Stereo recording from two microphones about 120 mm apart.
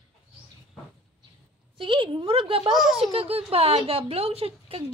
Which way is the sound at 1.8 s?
45° right (ahead or behind).